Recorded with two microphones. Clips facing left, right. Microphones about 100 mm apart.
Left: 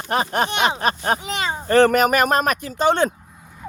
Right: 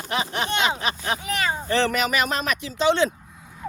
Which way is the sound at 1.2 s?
25° left (ahead or behind).